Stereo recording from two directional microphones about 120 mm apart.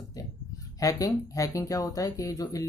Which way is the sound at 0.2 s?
30° left (ahead or behind).